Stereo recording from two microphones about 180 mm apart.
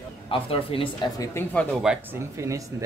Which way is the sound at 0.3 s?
30° left (ahead or behind).